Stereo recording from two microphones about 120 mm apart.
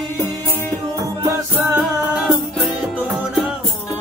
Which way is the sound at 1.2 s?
20° right (ahead or behind).